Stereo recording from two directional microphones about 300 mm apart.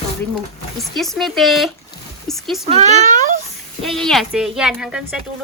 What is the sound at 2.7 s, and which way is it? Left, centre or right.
Speech, right.